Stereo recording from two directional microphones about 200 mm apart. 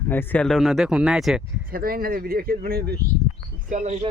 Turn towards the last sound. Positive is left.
turn(degrees=-35)  # may be behind; listen again after turning